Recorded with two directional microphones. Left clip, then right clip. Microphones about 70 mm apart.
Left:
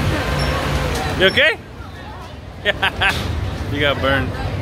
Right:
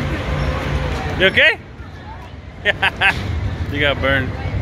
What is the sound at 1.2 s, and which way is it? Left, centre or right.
Speech, centre.